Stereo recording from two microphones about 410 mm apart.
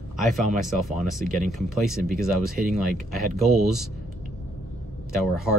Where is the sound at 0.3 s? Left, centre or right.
Centre.